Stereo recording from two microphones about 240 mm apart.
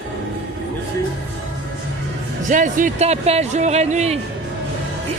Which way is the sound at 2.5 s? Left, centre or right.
Right.